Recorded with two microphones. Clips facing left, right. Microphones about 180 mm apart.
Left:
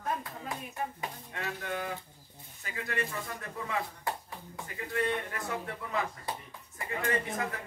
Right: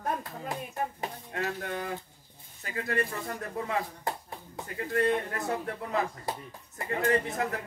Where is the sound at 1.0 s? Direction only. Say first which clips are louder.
Right 5 dB; 40° right (ahead or behind).